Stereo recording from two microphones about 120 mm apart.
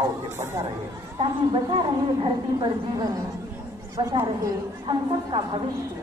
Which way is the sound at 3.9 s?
25° right (ahead or behind).